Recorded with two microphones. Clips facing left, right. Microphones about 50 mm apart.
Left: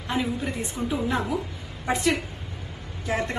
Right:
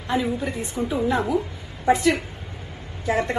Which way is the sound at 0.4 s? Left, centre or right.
Right.